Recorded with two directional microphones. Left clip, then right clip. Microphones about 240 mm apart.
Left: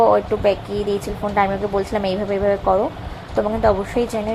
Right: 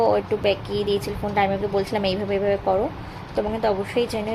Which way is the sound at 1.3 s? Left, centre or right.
Centre.